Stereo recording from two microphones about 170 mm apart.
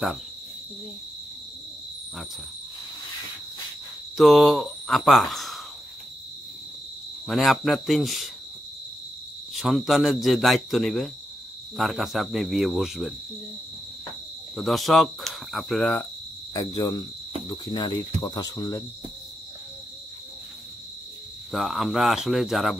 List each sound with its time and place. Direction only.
4.2 s speech: centre (ahead or behind)
7.2 s speech: centre (ahead or behind)
9.5 s speech: centre (ahead or behind)
14.5 s speech: centre (ahead or behind)
16.5 s speech: 20° left (ahead or behind)
21.5 s speech: centre (ahead or behind)